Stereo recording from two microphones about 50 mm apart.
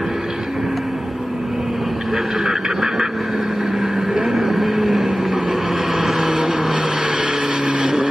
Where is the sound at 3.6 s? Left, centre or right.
Centre.